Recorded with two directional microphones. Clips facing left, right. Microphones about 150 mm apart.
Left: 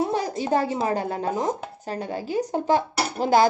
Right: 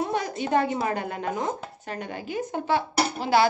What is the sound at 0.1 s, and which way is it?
A woman's voice, 35° left (ahead or behind).